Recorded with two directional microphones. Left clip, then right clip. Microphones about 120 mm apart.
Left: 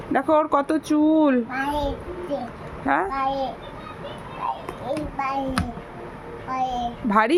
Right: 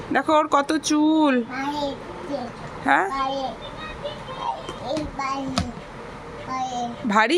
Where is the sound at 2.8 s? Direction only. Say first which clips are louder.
Right 3 dB; 15° left (ahead or behind).